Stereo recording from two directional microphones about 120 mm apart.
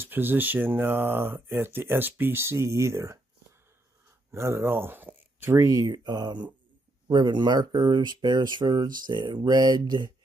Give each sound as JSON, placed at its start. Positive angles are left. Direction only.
{"t": 0.0, "sound": "speech", "side_deg": -15}
{"t": 4.3, "sound": "speech", "side_deg": -20}